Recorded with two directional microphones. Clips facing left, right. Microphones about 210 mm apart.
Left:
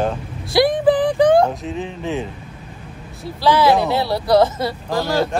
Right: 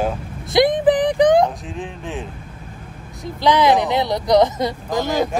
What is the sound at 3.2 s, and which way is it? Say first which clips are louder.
Speech: even; 15° right (ahead or behind).